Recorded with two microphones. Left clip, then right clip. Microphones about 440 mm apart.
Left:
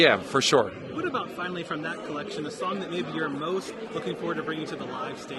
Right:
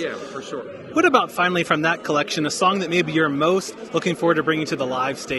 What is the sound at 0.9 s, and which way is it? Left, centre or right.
Speech, right.